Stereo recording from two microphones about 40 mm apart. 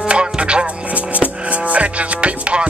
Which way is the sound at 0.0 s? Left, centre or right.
Right.